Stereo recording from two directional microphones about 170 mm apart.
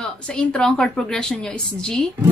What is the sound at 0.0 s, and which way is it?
A woman's voice, 5° left (ahead or behind).